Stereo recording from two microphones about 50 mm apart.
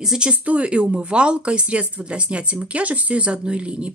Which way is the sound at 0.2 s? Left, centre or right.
Right.